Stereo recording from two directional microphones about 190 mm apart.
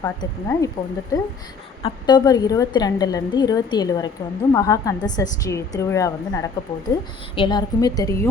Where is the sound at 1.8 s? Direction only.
20° left (ahead or behind).